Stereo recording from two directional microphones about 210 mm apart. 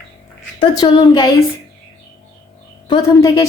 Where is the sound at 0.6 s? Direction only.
20° left (ahead or behind).